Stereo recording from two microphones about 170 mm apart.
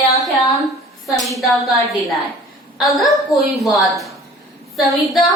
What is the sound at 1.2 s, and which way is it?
A woman's voice, centre (ahead or behind).